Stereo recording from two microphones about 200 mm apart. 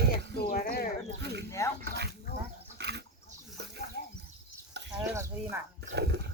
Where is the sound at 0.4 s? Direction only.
45° left (ahead or behind).